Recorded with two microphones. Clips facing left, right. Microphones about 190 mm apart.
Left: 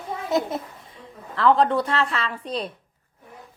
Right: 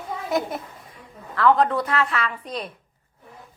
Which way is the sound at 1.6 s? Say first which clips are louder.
Left 1 dB; 30° left (ahead or behind).